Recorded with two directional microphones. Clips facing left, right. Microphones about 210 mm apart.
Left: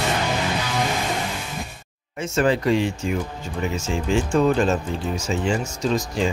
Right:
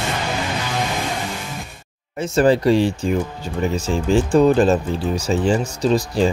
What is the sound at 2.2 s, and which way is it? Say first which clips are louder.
Speech: right 5 dB; 35° right (ahead or behind).